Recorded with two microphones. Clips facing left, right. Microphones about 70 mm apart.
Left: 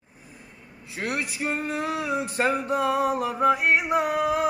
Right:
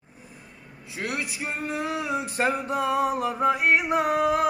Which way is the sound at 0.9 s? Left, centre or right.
Left.